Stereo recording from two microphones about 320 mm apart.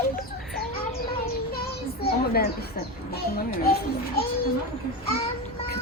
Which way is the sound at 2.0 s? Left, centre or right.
Left.